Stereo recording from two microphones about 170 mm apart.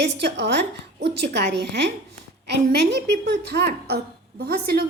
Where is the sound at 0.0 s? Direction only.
80° right.